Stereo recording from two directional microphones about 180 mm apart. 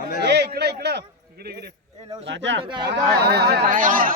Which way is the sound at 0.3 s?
65° right (ahead or behind).